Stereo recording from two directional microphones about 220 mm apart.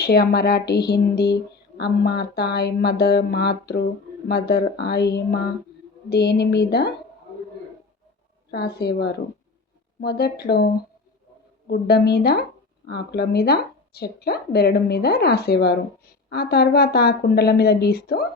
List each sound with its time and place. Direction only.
0.0 s a woman's voice: 45° left (ahead or behind)
8.4 s a woman's voice: 45° left (ahead or behind)
11.7 s a woman's voice: 45° left (ahead or behind)